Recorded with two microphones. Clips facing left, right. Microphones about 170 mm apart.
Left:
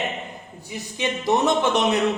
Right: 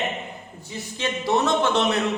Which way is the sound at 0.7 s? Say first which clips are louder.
Left 1 dB; 15° left (ahead or behind).